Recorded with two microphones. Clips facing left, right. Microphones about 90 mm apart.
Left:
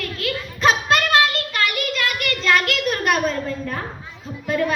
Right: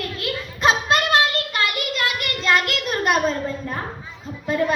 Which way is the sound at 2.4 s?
20° right (ahead or behind).